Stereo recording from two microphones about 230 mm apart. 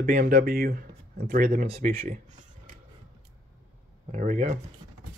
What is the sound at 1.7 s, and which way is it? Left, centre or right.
Speech, right.